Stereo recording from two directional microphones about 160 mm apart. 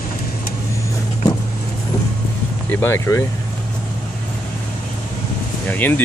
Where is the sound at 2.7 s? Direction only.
15° left (ahead or behind).